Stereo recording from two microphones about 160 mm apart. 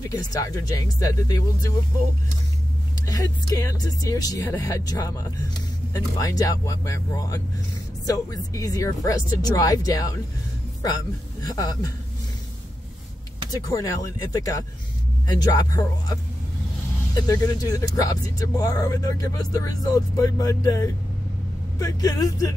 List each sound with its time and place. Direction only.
0.1 s speech: 25° left (ahead or behind)
3.1 s speech: 20° left (ahead or behind)
11.4 s speech: 25° left (ahead or behind)
13.5 s speech: 20° left (ahead or behind)
15.2 s speech: 25° left (ahead or behind)